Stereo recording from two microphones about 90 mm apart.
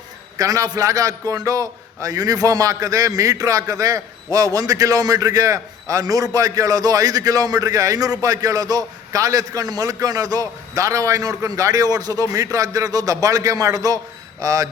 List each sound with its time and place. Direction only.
0.3 s a man's voice: 40° right (ahead or behind)